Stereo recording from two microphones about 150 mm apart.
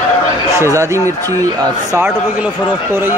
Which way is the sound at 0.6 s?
20° right (ahead or behind).